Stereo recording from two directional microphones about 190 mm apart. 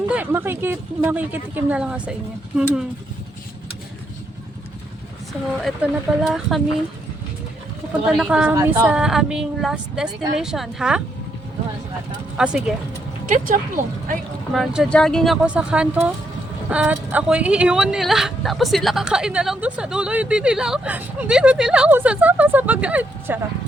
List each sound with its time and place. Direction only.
0.1 s speech: 10° right (ahead or behind)
5.6 s speech: centre (ahead or behind)
8.0 s speech: 5° right (ahead or behind)
12.4 s speech: 5° right (ahead or behind)
13.2 s speech: 45° right (ahead or behind)
14.5 s speech: centre (ahead or behind)